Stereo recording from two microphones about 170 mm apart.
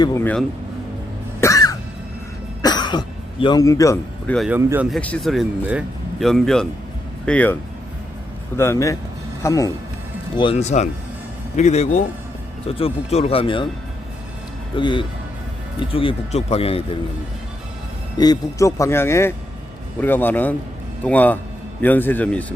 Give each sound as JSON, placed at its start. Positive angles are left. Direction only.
{"t": 0.0, "sound": "speech", "side_deg": 15}
{"t": 1.4, "sound": "cough", "side_deg": 20}
{"t": 3.4, "sound": "a man's voice", "side_deg": 20}
{"t": 4.4, "sound": "speech", "side_deg": -10}
{"t": 4.9, "sound": "speech", "side_deg": 5}
{"t": 8.5, "sound": "a man's voice", "side_deg": 15}
{"t": 10.6, "sound": "speech", "side_deg": 40}
{"t": 14.8, "sound": "a man's voice", "side_deg": 30}
{"t": 18.2, "sound": "speech", "side_deg": 20}